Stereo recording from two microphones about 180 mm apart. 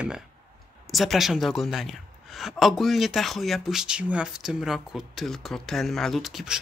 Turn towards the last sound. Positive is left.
turn(degrees=0)  # may be behind; listen again after turning